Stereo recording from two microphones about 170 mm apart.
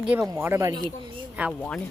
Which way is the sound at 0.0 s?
5° right (ahead or behind).